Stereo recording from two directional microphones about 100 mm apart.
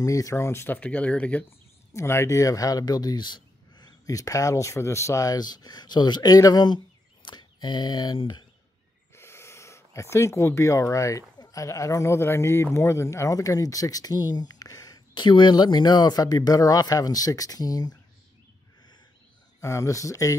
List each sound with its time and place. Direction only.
0.0 s speech: 35° left (ahead or behind); by 1.4 s 15° left (ahead or behind)
2.0 s speech: 30° left (ahead or behind); by 8.2 s 45° left (ahead or behind)
9.1 s speech: 25° left (ahead or behind)
15.1 s speech: 50° left (ahead or behind)
19.6 s speech: 30° left (ahead or behind)